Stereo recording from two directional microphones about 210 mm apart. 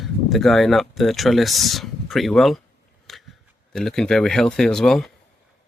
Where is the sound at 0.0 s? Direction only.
Centre (ahead or behind).